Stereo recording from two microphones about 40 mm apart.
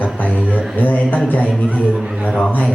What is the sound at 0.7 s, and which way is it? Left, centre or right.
Speech, left.